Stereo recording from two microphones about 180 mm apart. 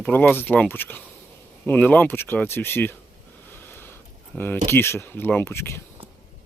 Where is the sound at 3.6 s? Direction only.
10° left (ahead or behind).